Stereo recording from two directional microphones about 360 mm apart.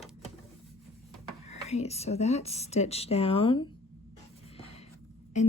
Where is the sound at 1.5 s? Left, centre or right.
Centre.